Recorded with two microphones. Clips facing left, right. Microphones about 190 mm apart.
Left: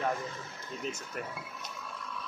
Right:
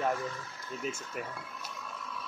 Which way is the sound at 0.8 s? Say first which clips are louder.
Right 1 dB; 5° right (ahead or behind).